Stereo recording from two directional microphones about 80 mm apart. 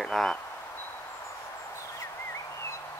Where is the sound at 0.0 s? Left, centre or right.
Centre.